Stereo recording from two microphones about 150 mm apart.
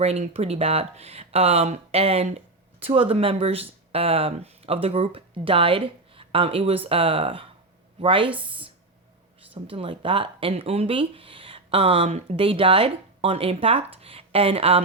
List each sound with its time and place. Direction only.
0.0 s speech: 45° right (ahead or behind)